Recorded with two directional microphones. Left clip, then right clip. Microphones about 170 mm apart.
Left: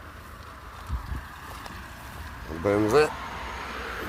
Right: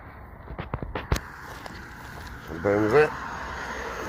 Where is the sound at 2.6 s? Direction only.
20° left (ahead or behind).